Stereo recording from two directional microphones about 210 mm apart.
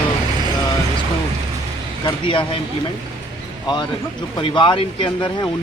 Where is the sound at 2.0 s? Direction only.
25° left (ahead or behind).